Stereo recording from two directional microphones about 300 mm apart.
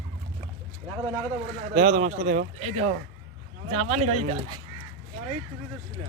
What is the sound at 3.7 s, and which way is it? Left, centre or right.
Speech, right.